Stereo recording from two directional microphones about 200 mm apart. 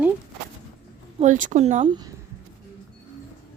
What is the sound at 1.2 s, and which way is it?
Speech, 40° right (ahead or behind).